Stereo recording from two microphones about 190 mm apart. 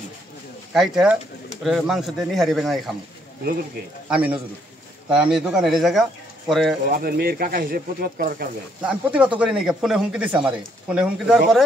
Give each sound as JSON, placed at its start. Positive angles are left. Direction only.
{"t": 0.7, "sound": "speech", "side_deg": 0}
{"t": 4.1, "sound": "a man's voice", "side_deg": -5}
{"t": 6.9, "sound": "speech", "side_deg": -50}
{"t": 8.8, "sound": "speech", "side_deg": -5}